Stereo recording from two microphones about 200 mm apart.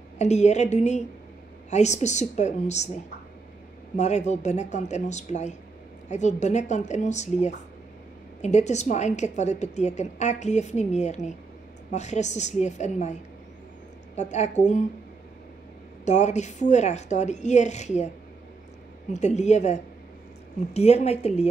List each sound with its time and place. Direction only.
0.2 s a woman's voice: 35° left (ahead or behind)
3.9 s a woman's voice: 35° left (ahead or behind)
16.1 s a woman's voice: 35° left (ahead or behind)
19.1 s a woman's voice: 35° left (ahead or behind)